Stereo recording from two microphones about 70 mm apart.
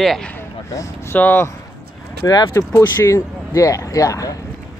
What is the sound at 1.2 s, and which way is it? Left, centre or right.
Speech, left.